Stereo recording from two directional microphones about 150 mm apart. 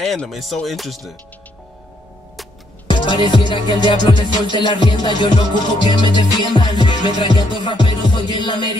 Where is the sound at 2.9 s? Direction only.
30° left (ahead or behind).